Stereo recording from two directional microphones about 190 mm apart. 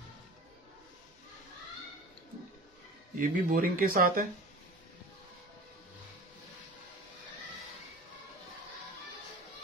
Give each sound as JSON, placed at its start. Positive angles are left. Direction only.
{"t": 3.2, "sound": "speech", "side_deg": -45}